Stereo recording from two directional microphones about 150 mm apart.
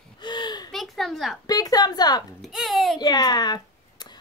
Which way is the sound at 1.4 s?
25° left (ahead or behind).